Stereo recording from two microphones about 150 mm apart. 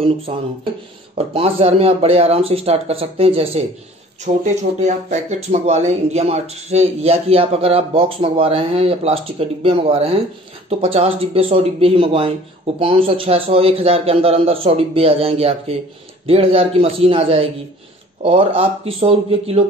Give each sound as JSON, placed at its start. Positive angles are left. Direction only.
{"t": 1.1, "sound": "speech", "side_deg": -40}
{"t": 4.3, "sound": "speech", "side_deg": -55}